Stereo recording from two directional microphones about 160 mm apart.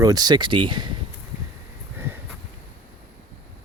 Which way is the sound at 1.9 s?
15° right (ahead or behind).